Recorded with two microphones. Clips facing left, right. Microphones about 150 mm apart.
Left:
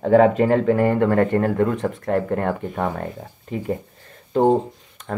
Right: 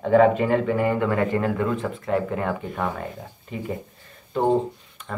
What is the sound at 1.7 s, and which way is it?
Speech, 70° left (ahead or behind).